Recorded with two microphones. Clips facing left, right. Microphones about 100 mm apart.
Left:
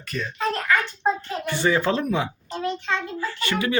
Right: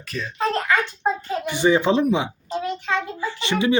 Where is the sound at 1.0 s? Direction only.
15° right (ahead or behind).